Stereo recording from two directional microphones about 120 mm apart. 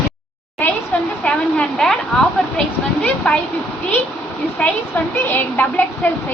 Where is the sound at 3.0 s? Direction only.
10° left (ahead or behind).